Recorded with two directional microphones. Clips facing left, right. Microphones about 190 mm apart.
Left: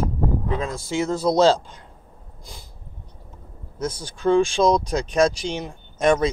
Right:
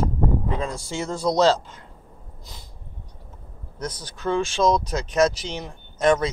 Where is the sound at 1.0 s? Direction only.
5° left (ahead or behind).